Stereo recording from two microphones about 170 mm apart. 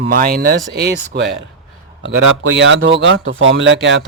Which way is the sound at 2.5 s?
90° right.